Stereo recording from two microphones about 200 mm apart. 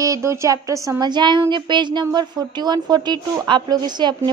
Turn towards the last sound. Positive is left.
turn(degrees=-20)  # may be behind; listen again after turning